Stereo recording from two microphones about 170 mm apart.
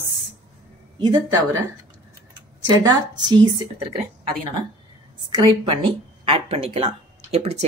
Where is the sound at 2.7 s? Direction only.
25° right (ahead or behind).